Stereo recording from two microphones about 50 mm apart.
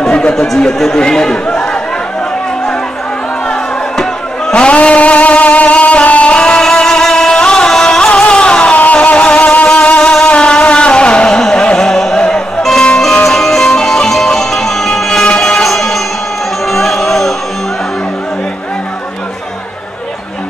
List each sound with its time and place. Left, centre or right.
0.1 s a man's voice: centre
3.4 s music: centre
4.6 s music: left
6.4 s music: centre
8.2 s vehicle: left
8.7 s music: left
10.2 s vehicle: left
11.6 s music: centre
15.6 s music: centre